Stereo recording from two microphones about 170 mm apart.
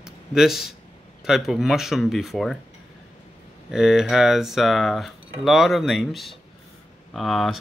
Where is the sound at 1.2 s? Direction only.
Centre (ahead or behind).